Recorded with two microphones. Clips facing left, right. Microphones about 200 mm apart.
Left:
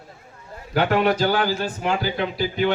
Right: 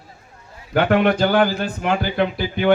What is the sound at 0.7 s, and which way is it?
Speech, 50° right (ahead or behind).